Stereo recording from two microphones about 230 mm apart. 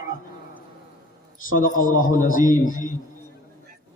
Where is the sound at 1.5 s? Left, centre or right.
Left.